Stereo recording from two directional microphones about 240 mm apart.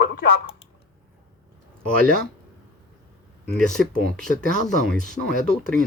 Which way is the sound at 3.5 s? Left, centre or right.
Centre.